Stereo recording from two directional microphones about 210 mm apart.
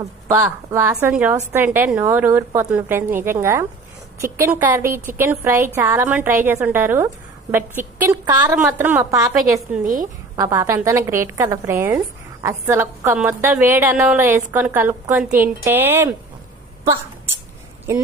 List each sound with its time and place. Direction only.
0.0 s a woman's voice: 15° right (ahead or behind)
9.8 s a woman's voice: 40° right (ahead or behind)
10.3 s a woman's voice: 15° right (ahead or behind)
17.9 s a woman's voice: 10° right (ahead or behind)